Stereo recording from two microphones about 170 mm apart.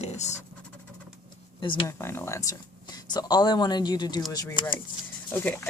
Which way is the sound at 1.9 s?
15° left (ahead or behind).